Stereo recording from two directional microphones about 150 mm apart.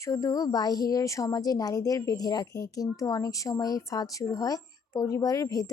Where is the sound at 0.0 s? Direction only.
20° left (ahead or behind).